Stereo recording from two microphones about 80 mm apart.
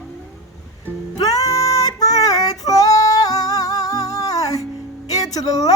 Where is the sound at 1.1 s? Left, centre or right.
Left.